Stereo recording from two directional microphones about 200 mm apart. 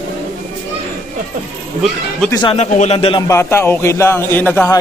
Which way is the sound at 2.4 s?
25° left (ahead or behind).